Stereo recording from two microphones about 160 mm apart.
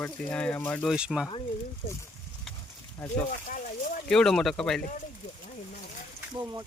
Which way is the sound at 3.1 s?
50° left (ahead or behind).